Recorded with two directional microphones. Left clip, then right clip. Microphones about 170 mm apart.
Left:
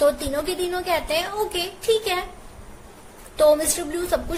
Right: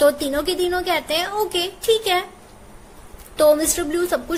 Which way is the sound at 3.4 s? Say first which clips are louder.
Right 2 dB; 35° right (ahead or behind).